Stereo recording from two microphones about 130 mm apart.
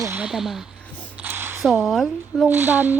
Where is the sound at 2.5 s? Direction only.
15° right (ahead or behind).